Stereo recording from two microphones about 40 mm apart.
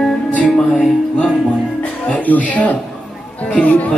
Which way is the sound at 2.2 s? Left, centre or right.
Left.